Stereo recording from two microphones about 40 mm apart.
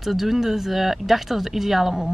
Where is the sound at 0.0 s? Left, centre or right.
Centre.